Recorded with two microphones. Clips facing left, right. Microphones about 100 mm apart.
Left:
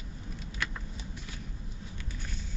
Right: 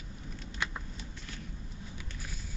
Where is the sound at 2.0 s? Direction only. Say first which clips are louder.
Left 2 dB; 5° right (ahead or behind).